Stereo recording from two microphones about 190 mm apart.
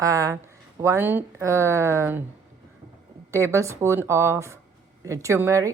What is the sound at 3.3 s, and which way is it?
A woman's voice, 15° right (ahead or behind).